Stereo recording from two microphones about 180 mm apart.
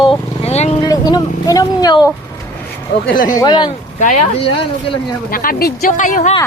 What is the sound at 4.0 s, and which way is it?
Speech, 45° left (ahead or behind).